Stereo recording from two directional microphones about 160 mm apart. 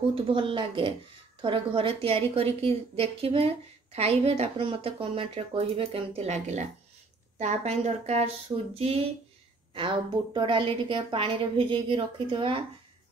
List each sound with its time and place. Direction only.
0.1 s a woman's voice: 30° right (ahead or behind)